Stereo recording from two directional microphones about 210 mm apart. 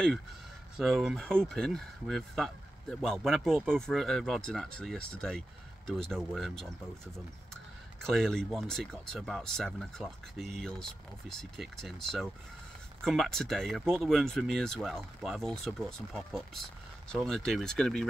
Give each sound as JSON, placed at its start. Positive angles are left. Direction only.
{"t": 0.7, "sound": "speech", "side_deg": 0}
{"t": 8.0, "sound": "speech", "side_deg": 0}